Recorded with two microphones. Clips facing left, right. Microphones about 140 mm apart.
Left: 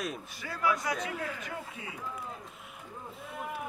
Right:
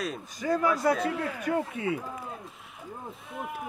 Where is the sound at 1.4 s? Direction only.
65° right (ahead or behind).